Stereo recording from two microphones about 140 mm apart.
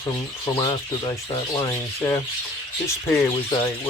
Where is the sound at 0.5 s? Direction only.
30° left (ahead or behind).